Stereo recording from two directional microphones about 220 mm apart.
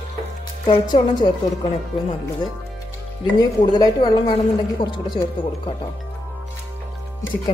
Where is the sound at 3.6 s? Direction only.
20° left (ahead or behind).